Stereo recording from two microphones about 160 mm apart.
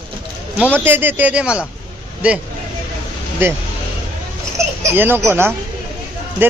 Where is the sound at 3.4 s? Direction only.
15° right (ahead or behind).